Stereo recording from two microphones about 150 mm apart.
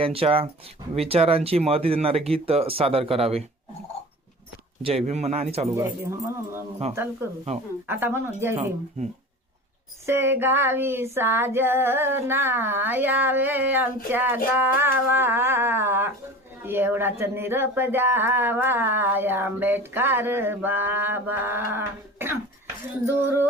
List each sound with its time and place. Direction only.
0.0 s speech: 40° right (ahead or behind)
4.8 s speech: 40° right (ahead or behind)
5.7 s speech: 20° right (ahead or behind)
10.1 s speech: 15° right (ahead or behind)
14.6 s music: 15° right (ahead or behind)
16.6 s speech: 15° right (ahead or behind)